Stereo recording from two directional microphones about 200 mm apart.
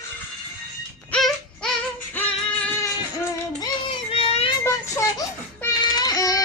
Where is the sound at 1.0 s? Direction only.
5° left (ahead or behind).